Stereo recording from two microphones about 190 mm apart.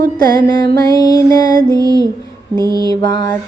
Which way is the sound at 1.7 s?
20° right (ahead or behind).